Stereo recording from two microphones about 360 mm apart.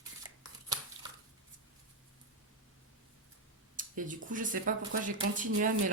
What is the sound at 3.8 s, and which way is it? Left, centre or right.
Speech, right.